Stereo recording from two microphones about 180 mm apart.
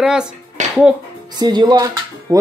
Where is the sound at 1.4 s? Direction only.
25° right (ahead or behind).